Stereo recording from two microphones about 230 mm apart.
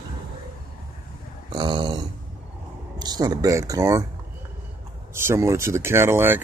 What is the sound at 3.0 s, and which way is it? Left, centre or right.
Speech, centre.